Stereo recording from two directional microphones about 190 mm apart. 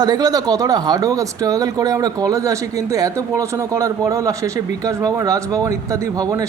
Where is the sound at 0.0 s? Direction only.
20° right (ahead or behind).